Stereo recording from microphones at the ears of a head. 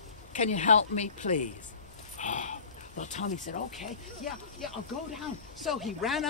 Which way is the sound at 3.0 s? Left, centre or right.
Left.